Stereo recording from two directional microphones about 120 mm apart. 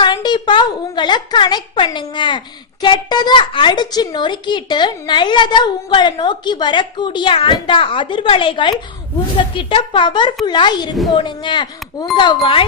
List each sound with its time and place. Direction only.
0.0 s a woman's voice: 35° left (ahead or behind)